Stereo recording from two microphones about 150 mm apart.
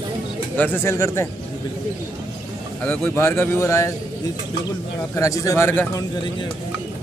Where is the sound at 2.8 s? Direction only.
15° left (ahead or behind).